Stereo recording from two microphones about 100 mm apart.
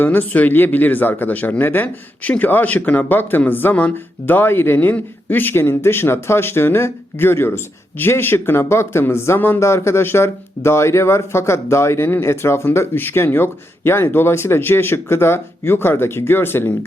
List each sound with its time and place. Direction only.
0.0 s speech: 20° left (ahead or behind)